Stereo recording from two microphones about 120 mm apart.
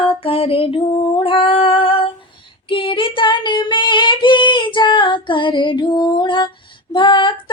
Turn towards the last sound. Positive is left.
turn(degrees=45)  # may be behind; listen again after turning